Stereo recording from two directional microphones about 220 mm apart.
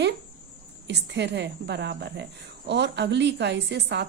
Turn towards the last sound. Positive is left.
turn(degrees=-50)  # may be behind; listen again after turning